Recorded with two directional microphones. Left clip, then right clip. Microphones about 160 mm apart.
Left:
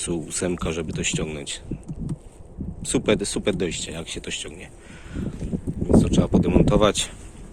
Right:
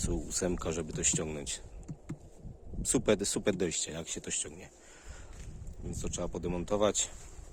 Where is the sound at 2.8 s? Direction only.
40° right (ahead or behind).